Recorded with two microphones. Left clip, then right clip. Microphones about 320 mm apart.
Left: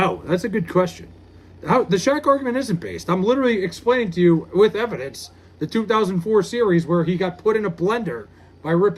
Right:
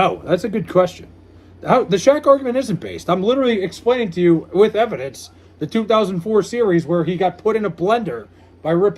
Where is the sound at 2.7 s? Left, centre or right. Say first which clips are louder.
Right 1 dB; centre.